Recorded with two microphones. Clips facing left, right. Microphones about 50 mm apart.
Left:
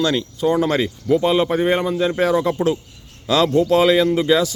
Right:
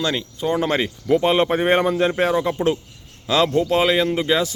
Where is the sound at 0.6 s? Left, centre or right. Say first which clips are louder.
Left 2 dB; right.